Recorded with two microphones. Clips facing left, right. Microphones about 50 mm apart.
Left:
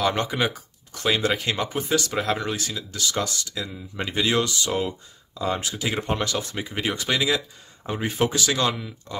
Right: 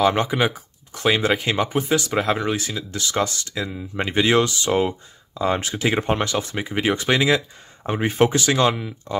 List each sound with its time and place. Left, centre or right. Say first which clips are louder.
0.0 s speech: right 4 dB; centre